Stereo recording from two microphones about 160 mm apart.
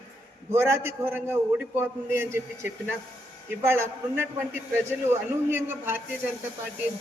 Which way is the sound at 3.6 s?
15° right (ahead or behind).